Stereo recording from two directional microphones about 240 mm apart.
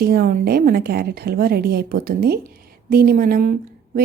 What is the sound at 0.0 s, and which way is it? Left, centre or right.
A woman's voice, right.